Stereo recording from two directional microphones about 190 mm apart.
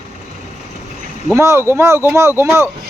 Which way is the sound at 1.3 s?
15° right (ahead or behind).